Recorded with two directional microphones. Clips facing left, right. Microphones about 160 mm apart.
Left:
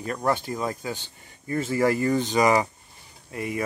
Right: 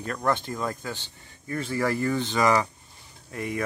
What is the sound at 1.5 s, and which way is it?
Speech, 20° left (ahead or behind).